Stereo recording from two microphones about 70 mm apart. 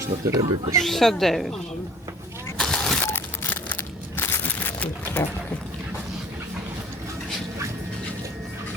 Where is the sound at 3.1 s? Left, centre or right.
Left.